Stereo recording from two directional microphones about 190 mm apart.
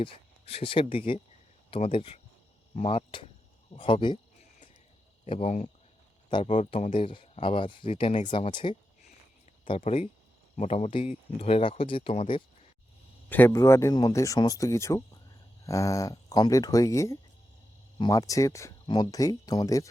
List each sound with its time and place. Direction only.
0.0 s speech: 30° left (ahead or behind)
5.2 s speech: 35° left (ahead or behind)
6.7 s speech: 35° left (ahead or behind)
13.3 s speech: 15° left (ahead or behind)